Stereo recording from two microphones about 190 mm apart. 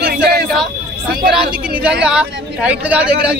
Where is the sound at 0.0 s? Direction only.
55° right (ahead or behind).